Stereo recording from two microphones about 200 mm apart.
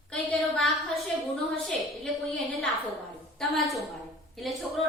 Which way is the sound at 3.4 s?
Centre (ahead or behind).